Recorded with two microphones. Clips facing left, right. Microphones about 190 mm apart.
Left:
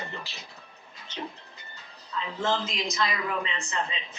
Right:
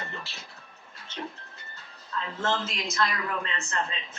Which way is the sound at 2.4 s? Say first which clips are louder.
Left 2 dB; 15° left (ahead or behind).